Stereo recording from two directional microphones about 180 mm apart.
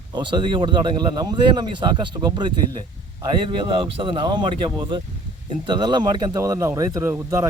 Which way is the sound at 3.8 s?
30° right (ahead or behind).